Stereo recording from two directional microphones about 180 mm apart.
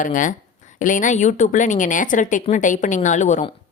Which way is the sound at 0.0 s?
45° left (ahead or behind).